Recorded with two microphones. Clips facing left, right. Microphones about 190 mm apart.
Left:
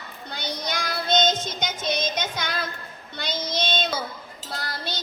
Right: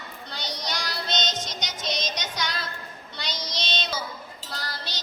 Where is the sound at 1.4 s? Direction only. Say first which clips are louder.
Left 5 dB; 55° left (ahead or behind).